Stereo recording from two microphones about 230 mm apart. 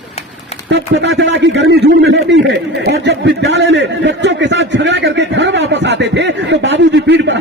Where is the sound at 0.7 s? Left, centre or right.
Right.